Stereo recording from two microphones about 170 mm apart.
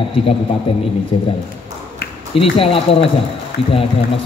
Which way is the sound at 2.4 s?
35° left (ahead or behind).